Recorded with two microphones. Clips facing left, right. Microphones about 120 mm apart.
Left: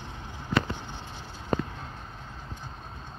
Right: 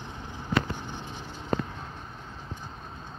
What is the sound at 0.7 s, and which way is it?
Vehicle, 15° right (ahead or behind).